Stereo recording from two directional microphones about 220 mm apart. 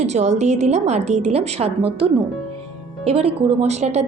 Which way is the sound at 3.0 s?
25° right (ahead or behind).